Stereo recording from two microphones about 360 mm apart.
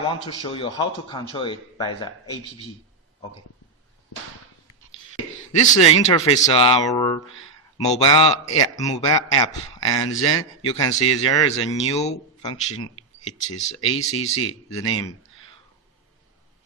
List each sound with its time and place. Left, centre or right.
0.1 s speech: centre
5.5 s speech: centre